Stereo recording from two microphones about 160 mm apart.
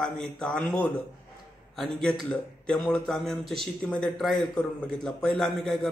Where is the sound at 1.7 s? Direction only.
Centre (ahead or behind).